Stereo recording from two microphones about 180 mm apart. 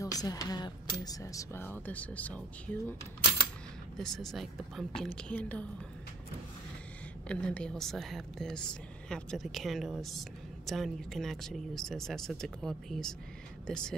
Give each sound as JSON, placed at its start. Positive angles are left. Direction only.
{"t": 0.0, "sound": "speech", "side_deg": 20}
{"t": 7.2, "sound": "speech", "side_deg": 5}